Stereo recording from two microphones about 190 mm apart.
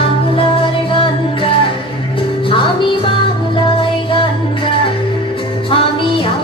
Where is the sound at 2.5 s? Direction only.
25° left (ahead or behind).